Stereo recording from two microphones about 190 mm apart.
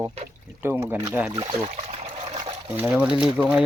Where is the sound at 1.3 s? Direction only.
25° right (ahead or behind).